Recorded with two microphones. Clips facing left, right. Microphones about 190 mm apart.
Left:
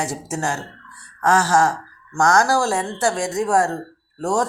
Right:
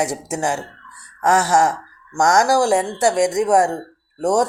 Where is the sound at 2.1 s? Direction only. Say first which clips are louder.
Right 2 dB; 20° right (ahead or behind).